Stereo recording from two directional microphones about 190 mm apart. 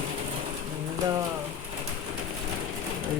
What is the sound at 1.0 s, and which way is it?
Rain, 20° right (ahead or behind).